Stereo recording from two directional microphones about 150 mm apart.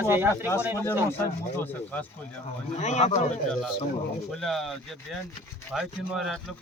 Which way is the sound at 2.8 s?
50° left (ahead or behind).